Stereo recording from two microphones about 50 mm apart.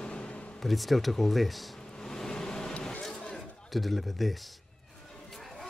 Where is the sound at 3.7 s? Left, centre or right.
Centre.